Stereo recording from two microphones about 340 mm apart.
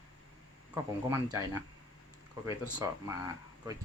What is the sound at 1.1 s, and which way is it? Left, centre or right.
Speech, centre.